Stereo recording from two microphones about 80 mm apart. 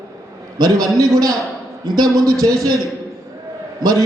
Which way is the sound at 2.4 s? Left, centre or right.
Right.